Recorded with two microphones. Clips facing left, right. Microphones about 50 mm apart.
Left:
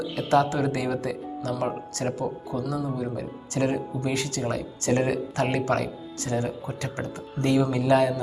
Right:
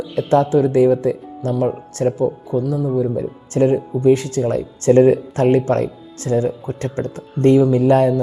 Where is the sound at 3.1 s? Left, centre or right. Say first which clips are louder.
Right 9 dB; right.